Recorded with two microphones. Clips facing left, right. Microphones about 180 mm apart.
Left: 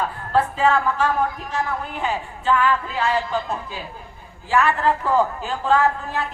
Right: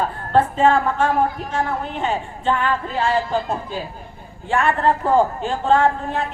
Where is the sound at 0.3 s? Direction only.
30° right (ahead or behind).